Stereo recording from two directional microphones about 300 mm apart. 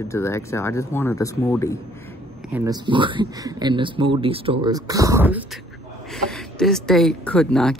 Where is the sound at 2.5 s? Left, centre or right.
Centre.